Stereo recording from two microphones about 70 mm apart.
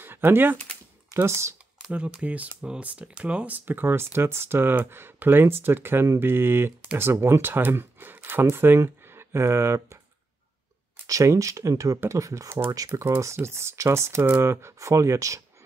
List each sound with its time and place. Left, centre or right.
0.0 s speech: right
1.1 s speech: right
1.9 s speech: centre; by 9.9 s right
11.1 s speech: right
13.0 s speech: right